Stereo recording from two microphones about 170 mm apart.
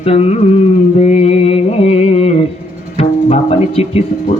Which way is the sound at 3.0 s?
40° left (ahead or behind).